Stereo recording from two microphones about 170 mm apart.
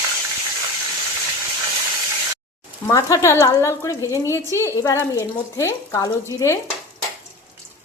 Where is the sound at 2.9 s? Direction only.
20° left (ahead or behind).